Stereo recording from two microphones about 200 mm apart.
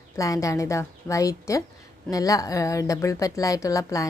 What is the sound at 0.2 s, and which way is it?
Speech, 15° left (ahead or behind).